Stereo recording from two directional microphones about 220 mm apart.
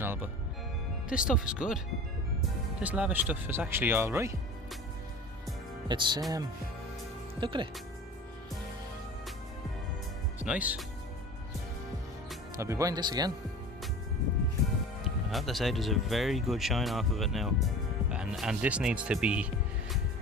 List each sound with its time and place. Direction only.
0.0 s music: 10° right (ahead or behind)
1.1 s speech: 5° right (ahead or behind)
2.8 s speech: 5° right (ahead or behind)
5.9 s speech: 20° right (ahead or behind)
7.3 s speech: 20° right (ahead or behind)
10.4 s speech: 5° right (ahead or behind)
12.5 s speech: 15° right (ahead or behind)
15.3 s speech: centre (ahead or behind)